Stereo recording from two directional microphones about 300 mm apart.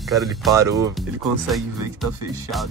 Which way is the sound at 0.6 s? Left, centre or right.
Centre.